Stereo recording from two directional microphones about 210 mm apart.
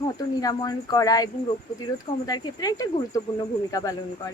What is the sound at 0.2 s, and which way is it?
Speech, 20° left (ahead or behind).